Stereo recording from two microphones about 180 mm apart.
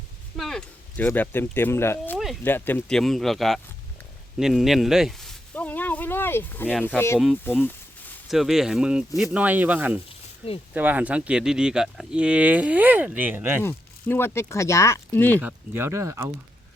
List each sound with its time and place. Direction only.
0.3 s speech: centre (ahead or behind)
2.1 s a sound: centre (ahead or behind)
2.4 s speech: 10° left (ahead or behind)
4.4 s a sound: centre (ahead or behind)
6.8 s speech: 10° left (ahead or behind)
8.3 s speech: centre (ahead or behind)
10.4 s speech: 35° left (ahead or behind)
10.8 s speech: 10° right (ahead or behind)
13.6 s speech: 10° left (ahead or behind)
15.4 s speech: 10° right (ahead or behind)